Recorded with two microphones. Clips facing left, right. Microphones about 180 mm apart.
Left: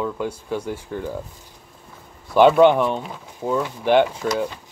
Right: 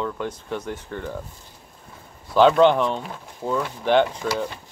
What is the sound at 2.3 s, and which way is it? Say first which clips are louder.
Speech: left 2 dB; 15° left (ahead or behind).